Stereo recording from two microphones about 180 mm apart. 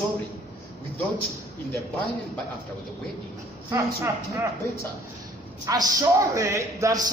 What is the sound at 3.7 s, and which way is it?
Speech, 15° right (ahead or behind).